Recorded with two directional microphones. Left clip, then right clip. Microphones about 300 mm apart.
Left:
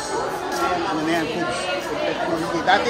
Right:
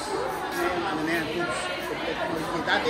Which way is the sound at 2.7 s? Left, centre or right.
Left.